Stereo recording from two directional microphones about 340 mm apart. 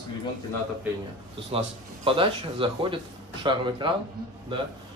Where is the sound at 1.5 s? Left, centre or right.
Centre.